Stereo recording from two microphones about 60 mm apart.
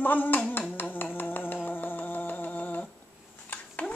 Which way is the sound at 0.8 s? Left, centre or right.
Left.